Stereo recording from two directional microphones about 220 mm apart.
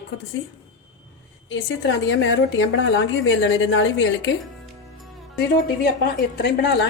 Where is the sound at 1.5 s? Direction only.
55° left (ahead or behind).